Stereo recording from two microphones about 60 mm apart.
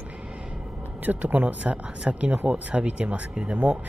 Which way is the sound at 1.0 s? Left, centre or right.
Right.